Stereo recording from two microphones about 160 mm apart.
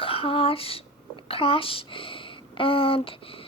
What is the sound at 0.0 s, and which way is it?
Speech, 35° left (ahead or behind).